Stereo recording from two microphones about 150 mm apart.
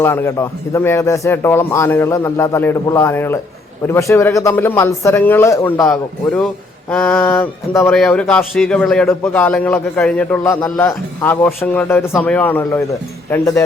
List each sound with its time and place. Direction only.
0.0 s a man's voice: 15° left (ahead or behind)
7.7 s a man's voice: 15° left (ahead or behind)